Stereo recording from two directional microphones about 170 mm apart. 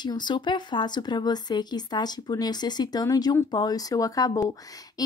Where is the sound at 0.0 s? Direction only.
25° left (ahead or behind).